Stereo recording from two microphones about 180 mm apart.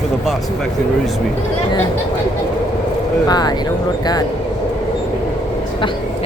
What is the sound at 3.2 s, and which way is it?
Speech, 20° left (ahead or behind).